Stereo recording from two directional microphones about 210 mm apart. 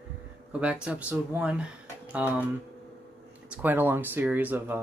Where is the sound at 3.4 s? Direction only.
5° right (ahead or behind).